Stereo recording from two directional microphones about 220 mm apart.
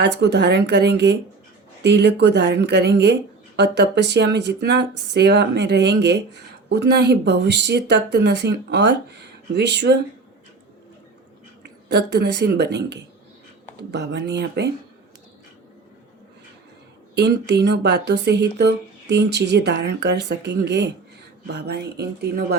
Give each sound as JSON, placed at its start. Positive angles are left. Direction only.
{"t": 0.0, "sound": "speech", "side_deg": -50}
{"t": 11.6, "sound": "speech", "side_deg": -50}
{"t": 17.2, "sound": "speech", "side_deg": -50}